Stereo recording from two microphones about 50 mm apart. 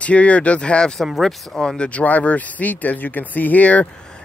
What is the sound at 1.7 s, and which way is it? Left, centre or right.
Speech, left.